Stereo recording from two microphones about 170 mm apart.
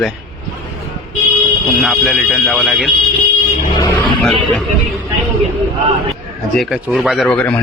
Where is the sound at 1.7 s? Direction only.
Centre (ahead or behind).